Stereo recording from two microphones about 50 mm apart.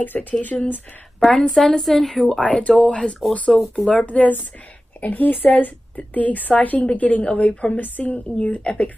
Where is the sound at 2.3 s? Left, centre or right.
Left.